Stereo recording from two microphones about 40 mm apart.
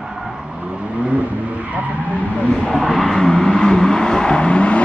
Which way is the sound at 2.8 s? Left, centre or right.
Centre.